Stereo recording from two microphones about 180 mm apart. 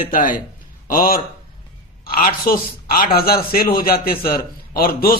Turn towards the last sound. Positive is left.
turn(degrees=55)  # may be behind; listen again after turning